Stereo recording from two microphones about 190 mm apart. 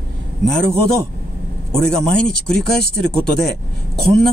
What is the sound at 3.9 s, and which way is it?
Speech, centre (ahead or behind).